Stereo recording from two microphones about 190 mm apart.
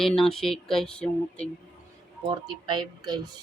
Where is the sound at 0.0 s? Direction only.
Centre (ahead or behind).